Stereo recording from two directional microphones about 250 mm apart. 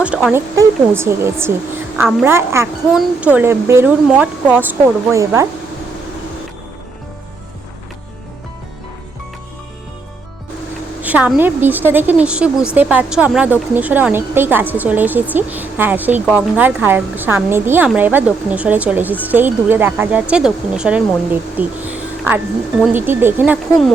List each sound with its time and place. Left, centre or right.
0.0 s a woman's voice: centre
11.0 s a woman's voice: centre